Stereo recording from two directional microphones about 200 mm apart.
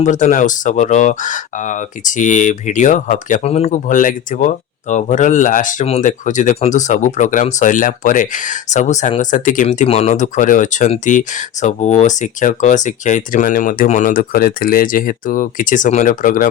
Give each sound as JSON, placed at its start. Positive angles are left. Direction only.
{"t": 0.0, "sound": "speech", "side_deg": 40}